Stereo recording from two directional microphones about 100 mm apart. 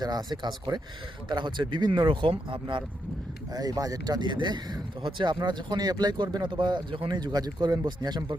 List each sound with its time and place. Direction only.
0.0 s speech: 40° right (ahead or behind)
3.5 s speech: 40° right (ahead or behind)